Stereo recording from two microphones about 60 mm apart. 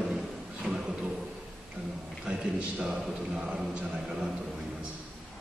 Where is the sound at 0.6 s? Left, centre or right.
Centre.